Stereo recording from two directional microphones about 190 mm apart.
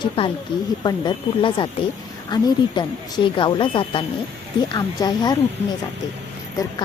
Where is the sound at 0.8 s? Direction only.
25° left (ahead or behind).